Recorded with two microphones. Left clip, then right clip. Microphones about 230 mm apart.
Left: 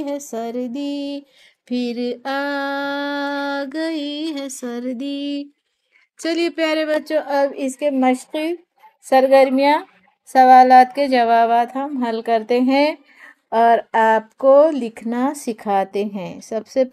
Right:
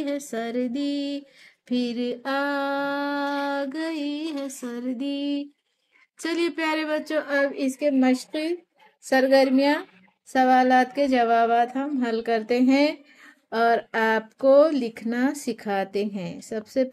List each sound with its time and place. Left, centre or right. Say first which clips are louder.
0.0 s a woman's voice: left 3 dB; centre
1.7 s a sound: left 4 dB; left
6.1 s a woman's voice: left 6 dB; left; by 16.9 s centre